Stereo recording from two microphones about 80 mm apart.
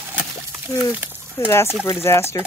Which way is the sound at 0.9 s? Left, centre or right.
Centre.